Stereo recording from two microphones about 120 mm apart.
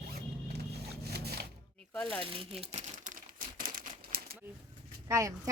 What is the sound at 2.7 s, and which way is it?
Speech, 90° right.